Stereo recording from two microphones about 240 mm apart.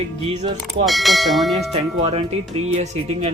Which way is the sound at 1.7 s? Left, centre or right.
Right.